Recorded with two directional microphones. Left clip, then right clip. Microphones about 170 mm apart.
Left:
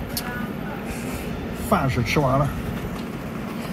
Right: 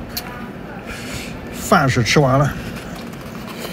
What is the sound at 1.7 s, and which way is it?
Speech, 90° right.